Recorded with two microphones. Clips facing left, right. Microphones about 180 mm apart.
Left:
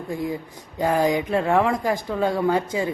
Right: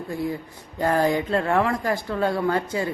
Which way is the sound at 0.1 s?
15° left (ahead or behind).